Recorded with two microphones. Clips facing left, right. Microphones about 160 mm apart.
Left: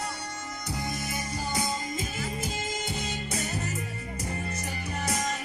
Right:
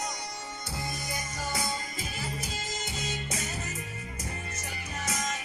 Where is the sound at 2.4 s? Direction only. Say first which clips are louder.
Left 4 dB; 55° left (ahead or behind).